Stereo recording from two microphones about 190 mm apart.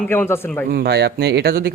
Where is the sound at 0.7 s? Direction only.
60° right (ahead or behind).